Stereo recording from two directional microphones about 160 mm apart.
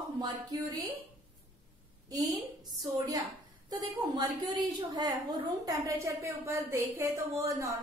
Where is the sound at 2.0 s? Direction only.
20° right (ahead or behind).